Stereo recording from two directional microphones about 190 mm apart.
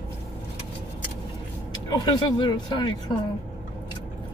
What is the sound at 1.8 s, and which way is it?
Speech, 20° left (ahead or behind).